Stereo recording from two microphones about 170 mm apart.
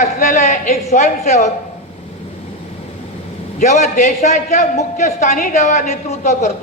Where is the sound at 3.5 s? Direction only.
45° left (ahead or behind).